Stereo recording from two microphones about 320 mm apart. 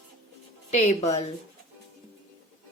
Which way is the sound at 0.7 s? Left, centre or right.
Centre.